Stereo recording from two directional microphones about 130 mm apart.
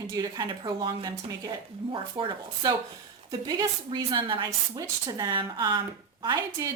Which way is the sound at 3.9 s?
40° right (ahead or behind).